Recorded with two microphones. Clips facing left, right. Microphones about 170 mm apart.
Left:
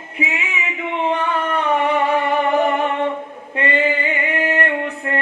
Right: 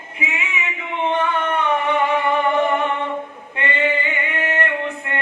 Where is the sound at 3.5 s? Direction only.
35° left (ahead or behind).